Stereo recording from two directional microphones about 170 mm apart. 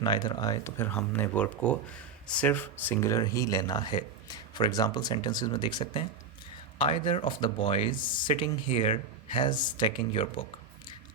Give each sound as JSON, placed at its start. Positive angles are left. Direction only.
{"t": 0.0, "sound": "speech", "side_deg": 25}